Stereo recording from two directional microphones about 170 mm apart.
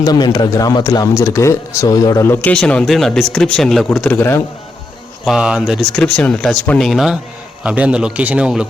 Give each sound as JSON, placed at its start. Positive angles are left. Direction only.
{"t": 0.0, "sound": "speech", "side_deg": 25}
{"t": 5.2, "sound": "a man's voice", "side_deg": -5}